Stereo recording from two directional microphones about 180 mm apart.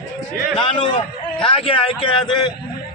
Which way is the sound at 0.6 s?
25° left (ahead or behind).